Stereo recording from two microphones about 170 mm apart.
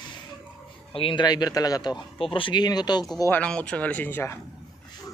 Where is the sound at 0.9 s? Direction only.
30° left (ahead or behind).